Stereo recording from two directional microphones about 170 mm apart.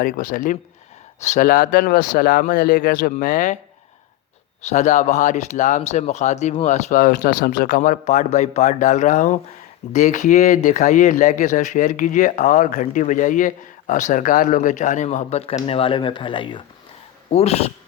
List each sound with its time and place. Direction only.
0.0 s speech: 50° left (ahead or behind)
4.6 s speech: 45° left (ahead or behind)